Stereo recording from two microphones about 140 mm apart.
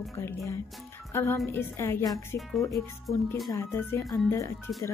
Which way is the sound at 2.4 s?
Centre (ahead or behind).